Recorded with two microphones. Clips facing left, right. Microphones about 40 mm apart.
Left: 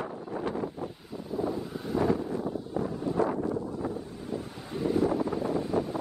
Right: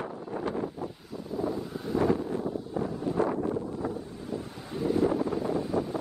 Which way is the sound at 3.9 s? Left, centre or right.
Centre.